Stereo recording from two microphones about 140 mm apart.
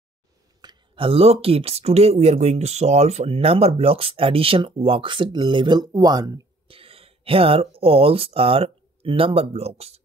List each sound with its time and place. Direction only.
0.6 s speech: 35° right (ahead or behind)
6.7 s speech: 40° right (ahead or behind)